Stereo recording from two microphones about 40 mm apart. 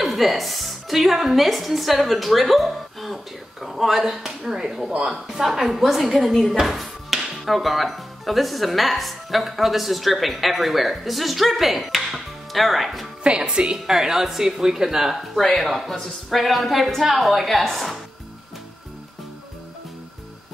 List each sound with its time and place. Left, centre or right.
0.0 s a woman's voice: centre
4.5 s speech: centre
13.2 s speech: right
13.8 s a woman's voice: centre